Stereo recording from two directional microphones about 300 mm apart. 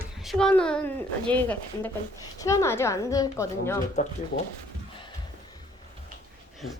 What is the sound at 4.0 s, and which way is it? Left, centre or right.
Speech, left.